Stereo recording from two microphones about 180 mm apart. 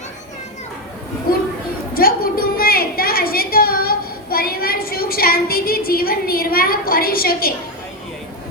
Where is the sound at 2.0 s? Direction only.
55° left (ahead or behind).